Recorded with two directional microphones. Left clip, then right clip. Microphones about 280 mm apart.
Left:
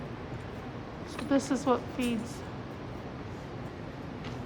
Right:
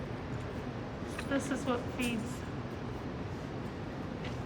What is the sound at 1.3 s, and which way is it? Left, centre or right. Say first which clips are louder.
Speech: left 7 dB; centre.